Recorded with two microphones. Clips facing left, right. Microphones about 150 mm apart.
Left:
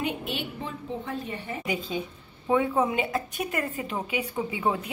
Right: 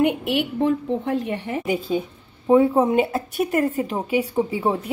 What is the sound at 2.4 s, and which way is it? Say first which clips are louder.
A woman's voice: right 8 dB; 35° right (ahead or behind).